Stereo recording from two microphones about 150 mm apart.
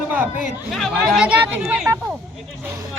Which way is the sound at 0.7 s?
Centre (ahead or behind).